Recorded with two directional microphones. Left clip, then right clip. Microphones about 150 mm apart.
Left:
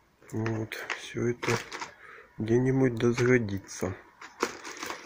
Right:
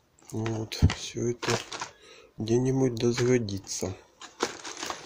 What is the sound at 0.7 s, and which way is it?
Speech, centre (ahead or behind).